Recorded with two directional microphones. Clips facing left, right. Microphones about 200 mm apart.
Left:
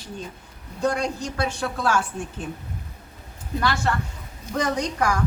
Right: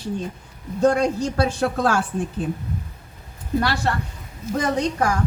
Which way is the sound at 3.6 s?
35° right (ahead or behind).